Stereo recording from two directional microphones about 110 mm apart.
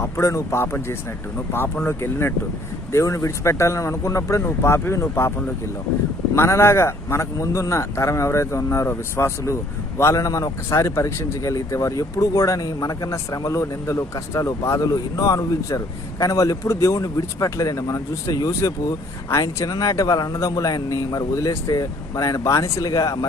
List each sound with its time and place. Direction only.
0.0 s a man's voice: 30° left (ahead or behind)
6.3 s a man's voice: 25° left (ahead or behind)